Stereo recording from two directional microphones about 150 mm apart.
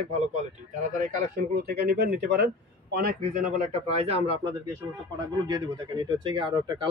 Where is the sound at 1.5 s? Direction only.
90° right; by 4.4 s 45° right (ahead or behind).